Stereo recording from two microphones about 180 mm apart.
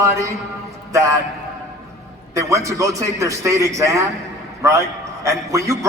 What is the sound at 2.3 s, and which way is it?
A man's voice, 15° right (ahead or behind).